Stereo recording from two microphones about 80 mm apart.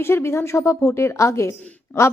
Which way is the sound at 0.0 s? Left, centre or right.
Left.